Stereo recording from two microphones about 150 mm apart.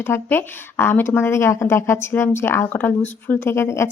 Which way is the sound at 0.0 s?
15° left (ahead or behind).